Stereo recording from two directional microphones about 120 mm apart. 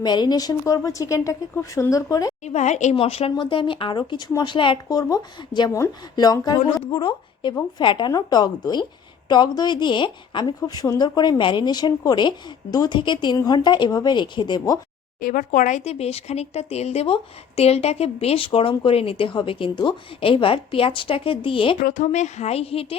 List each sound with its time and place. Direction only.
0.0 s a woman's voice: 35° left (ahead or behind)
2.4 s a woman's voice: 75° left (ahead or behind)
2.9 s a woman's voice: 50° left (ahead or behind); by 6.6 s 35° left (ahead or behind)
6.9 s a woman's voice: 45° left (ahead or behind)
10.6 s a woman's voice: 30° left (ahead or behind)
15.5 s speech: 90° left; by 21.8 s 45° left (ahead or behind)
21.9 s speech: 80° left; by 23.0 s 55° left (ahead or behind)